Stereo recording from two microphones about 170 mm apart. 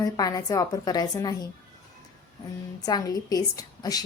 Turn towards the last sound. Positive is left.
turn(degrees=20)  # may be behind; listen again after turning